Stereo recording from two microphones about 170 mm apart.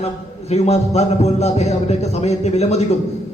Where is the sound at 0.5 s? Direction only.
40° left (ahead or behind).